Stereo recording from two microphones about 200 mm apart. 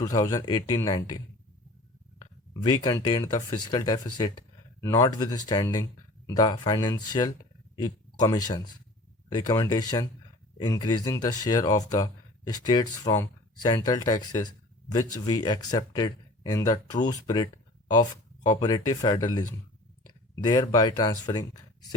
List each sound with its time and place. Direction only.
0.0 s speech: 15° left (ahead or behind)
2.5 s speech: 20° left (ahead or behind)
20.3 s speech: 20° left (ahead or behind)